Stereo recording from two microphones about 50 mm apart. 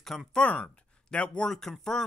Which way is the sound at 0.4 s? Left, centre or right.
Left.